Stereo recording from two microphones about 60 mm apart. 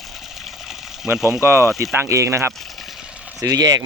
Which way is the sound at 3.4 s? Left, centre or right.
Right.